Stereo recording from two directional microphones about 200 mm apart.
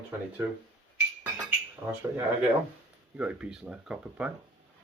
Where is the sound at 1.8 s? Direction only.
5° right (ahead or behind).